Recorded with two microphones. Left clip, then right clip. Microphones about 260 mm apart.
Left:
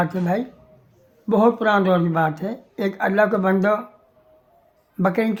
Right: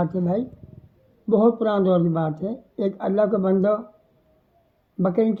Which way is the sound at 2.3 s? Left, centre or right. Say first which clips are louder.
Left 1 dB; centre.